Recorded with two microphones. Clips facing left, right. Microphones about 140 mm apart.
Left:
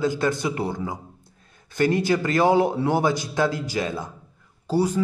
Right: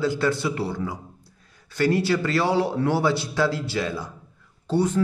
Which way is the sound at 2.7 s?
20° left (ahead or behind).